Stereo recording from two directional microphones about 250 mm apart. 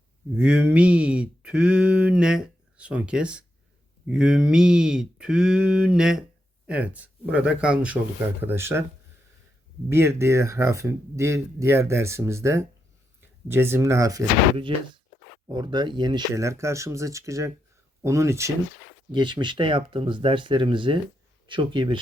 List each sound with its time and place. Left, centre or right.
0.3 s speech: centre
9.9 s speech: centre